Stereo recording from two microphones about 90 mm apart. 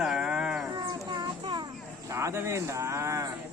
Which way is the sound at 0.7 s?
55° right (ahead or behind).